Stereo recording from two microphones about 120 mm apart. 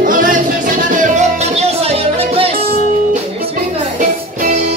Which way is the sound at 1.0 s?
85° right.